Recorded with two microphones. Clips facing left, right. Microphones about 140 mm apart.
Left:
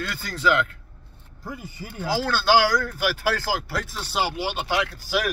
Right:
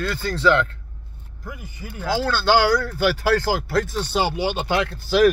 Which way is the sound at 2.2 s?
10° left (ahead or behind).